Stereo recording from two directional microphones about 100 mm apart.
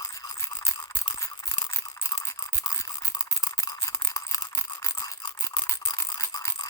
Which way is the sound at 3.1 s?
35° left (ahead or behind).